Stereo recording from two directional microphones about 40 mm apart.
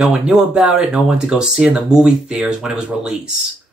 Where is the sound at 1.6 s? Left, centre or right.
Right.